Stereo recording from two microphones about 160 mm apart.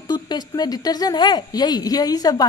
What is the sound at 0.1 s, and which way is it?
Speech, 25° left (ahead or behind).